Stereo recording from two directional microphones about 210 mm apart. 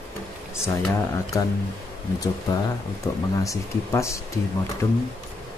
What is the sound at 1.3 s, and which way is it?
Speech, 15° left (ahead or behind).